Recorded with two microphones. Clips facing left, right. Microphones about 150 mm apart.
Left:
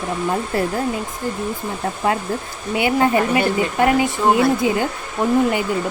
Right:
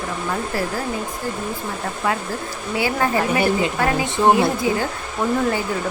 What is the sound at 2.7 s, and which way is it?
Speech, 20° left (ahead or behind).